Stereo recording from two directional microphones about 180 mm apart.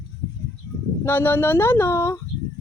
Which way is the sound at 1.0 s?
10° left (ahead or behind).